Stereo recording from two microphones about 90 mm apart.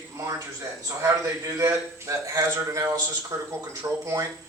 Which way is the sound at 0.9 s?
30° right (ahead or behind).